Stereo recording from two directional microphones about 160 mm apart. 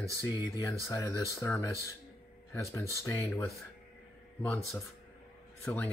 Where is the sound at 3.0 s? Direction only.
15° left (ahead or behind).